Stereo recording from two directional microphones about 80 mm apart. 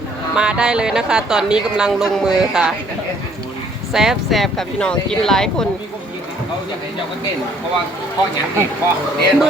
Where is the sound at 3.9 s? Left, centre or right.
Centre.